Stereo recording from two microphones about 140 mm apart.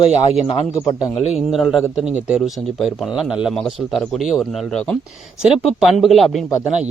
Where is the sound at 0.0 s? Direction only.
45° left (ahead or behind).